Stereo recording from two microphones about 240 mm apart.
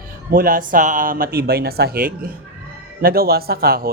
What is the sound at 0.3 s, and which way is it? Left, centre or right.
A man's voice, right.